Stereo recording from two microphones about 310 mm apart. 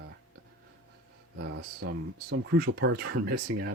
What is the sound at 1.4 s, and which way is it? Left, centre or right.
Speech, right.